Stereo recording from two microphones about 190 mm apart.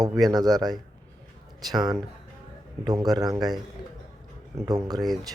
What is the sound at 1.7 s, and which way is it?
Speech, 20° right (ahead or behind).